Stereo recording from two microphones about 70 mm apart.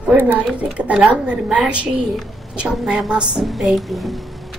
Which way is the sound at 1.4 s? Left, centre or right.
Centre.